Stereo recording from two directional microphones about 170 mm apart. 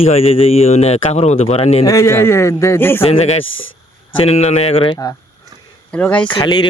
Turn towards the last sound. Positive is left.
turn(degrees=25)  # may be behind; listen again after turning